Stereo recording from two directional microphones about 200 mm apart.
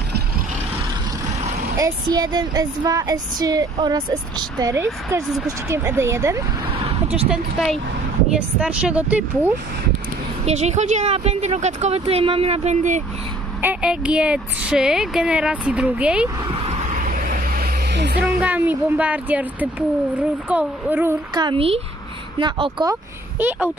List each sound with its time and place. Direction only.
1.8 s a woman's voice: 15° right (ahead or behind)
6.7 s a sound: 30° right (ahead or behind)
7.2 s a woman's voice: centre (ahead or behind)
10.4 s speech: 35° right (ahead or behind)
13.6 s speech: 5° right (ahead or behind)
16.4 s vehicle: 30° right (ahead or behind); by 18.2 s 55° right (ahead or behind)
18.4 s a woman's voice: 5° right (ahead or behind); by 22.9 s 25° right (ahead or behind)